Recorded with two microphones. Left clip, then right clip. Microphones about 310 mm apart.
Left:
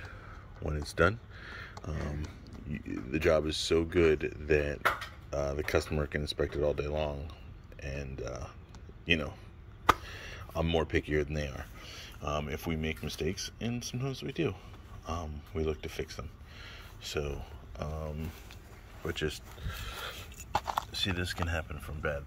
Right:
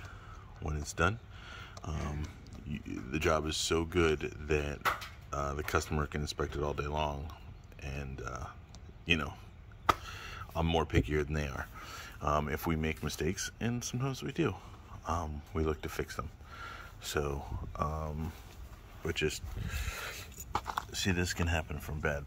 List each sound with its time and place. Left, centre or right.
0.7 s a man's voice: centre
19.9 s a sound: centre
20.5 s keys jangling: left
20.9 s speech: centre